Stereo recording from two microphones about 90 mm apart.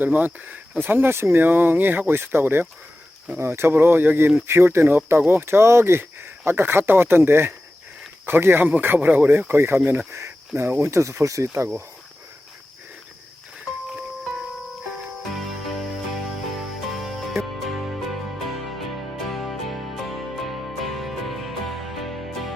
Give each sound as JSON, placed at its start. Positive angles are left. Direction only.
{"t": 0.0, "sound": "speech", "side_deg": -20}
{"t": 16.6, "sound": "music", "side_deg": 0}